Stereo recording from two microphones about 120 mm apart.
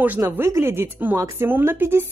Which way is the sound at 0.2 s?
25° right (ahead or behind).